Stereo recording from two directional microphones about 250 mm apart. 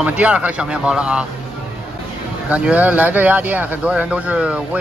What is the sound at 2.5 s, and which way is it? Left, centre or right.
Speech, centre.